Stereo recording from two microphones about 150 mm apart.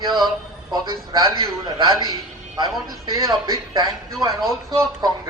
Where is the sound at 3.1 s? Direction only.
25° right (ahead or behind).